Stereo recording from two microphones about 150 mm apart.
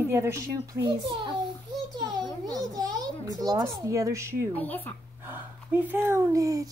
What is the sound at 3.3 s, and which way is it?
Speech, 25° right (ahead or behind).